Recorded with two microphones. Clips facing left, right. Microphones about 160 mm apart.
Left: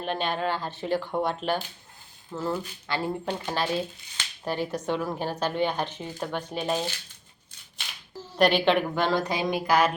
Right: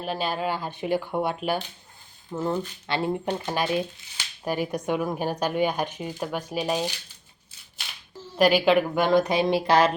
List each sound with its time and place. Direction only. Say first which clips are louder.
0.0 s a woman's voice: even; 5° right (ahead or behind)
2.3 s a woman's voice: right 3 dB; 20° right (ahead or behind)
8.4 s a woman's voice: right 2 dB; 5° right (ahead or behind)
9.0 s a sound: right 5 dB; 20° right (ahead or behind)